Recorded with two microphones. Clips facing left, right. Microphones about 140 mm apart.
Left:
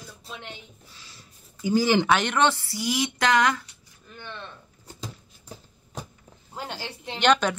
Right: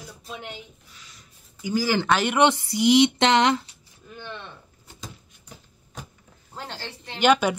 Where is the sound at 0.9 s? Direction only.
30° left (ahead or behind).